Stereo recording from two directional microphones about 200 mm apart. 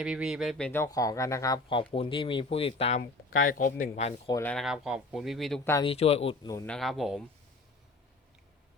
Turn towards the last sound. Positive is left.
turn(degrees=0)  # may be behind; listen again after turning